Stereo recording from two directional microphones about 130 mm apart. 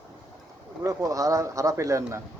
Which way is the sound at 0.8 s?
25° right (ahead or behind).